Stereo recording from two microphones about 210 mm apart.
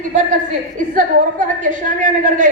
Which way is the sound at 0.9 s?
40° right (ahead or behind).